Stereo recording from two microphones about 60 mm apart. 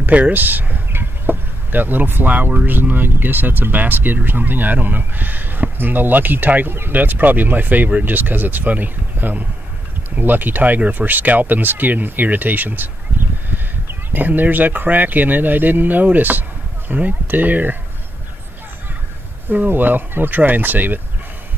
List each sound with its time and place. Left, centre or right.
0.0 s speech: right
19.5 s speech: right